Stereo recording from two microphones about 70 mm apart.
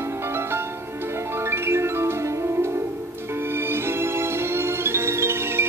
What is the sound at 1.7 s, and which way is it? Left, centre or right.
Music, right.